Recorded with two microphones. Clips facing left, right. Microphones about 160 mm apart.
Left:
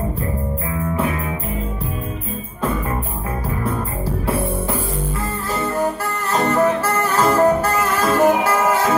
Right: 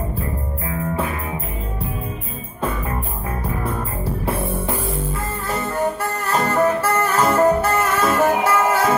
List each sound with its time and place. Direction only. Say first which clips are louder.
6.3 s music: left 2 dB; 30° left (ahead or behind)
6.8 s music: right 1 dB; 30° right (ahead or behind)
7.2 s music: left 1 dB; 30° left (ahead or behind)
7.6 s music: even; 25° right (ahead or behind)
8.1 s music: left 4 dB; 25° left (ahead or behind)